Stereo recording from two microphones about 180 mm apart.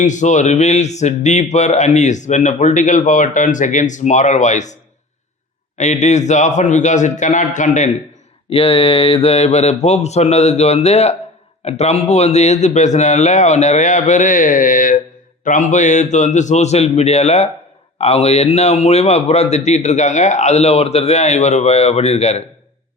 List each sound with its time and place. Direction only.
0.0 s speech: 45° left (ahead or behind)
5.7 s speech: 40° left (ahead or behind)
8.4 s speech: 30° left (ahead or behind)